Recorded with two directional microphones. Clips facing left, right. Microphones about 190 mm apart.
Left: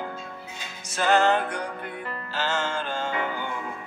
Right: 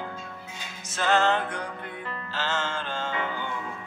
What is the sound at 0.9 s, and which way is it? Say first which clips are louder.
Music: left 2 dB; 10° left (ahead or behind).